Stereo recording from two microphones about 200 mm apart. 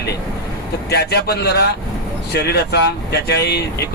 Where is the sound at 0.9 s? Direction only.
55° left (ahead or behind).